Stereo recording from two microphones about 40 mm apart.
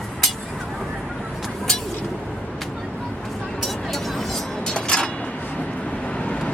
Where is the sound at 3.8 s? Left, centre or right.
Centre.